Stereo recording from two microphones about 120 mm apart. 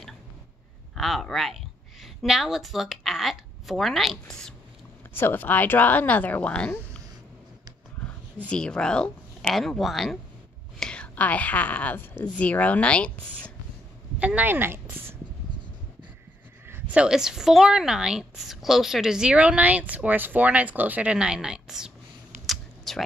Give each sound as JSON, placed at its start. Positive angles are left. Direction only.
{"t": 0.9, "sound": "a woman's voice", "side_deg": 0}
{"t": 5.1, "sound": "speech", "side_deg": 15}
{"t": 8.5, "sound": "a woman's voice", "side_deg": 5}
{"t": 14.2, "sound": "speech", "side_deg": -15}
{"t": 16.6, "sound": "a woman's voice", "side_deg": -15}
{"t": 22.5, "sound": "typing", "side_deg": 0}